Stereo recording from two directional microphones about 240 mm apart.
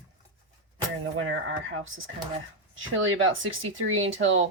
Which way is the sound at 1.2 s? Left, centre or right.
Right.